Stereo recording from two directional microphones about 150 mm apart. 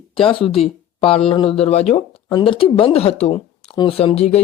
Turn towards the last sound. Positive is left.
turn(degrees=45)  # may be behind; listen again after turning